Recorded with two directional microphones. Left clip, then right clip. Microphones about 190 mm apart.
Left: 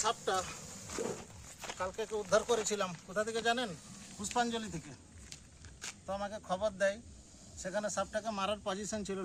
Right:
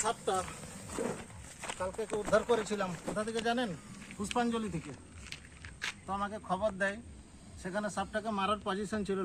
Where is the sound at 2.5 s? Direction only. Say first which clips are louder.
Right 2 dB; 35° left (ahead or behind).